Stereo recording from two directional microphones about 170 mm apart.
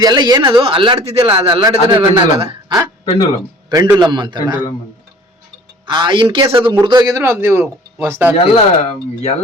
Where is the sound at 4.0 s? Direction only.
25° right (ahead or behind).